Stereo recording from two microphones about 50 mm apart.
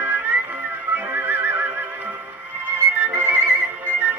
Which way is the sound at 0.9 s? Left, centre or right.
Right.